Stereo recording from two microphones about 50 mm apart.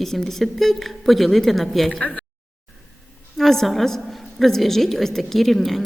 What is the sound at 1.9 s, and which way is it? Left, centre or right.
Speech, centre.